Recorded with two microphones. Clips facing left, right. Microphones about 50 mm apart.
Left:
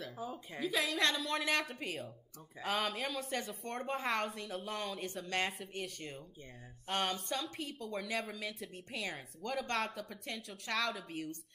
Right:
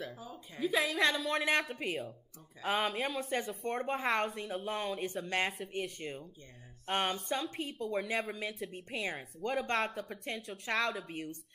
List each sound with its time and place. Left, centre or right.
0.2 s a woman's voice: centre
0.6 s a woman's voice: centre
9.0 s speech: right
9.8 s speech: centre
10.5 s speech: right
10.8 s speech: centre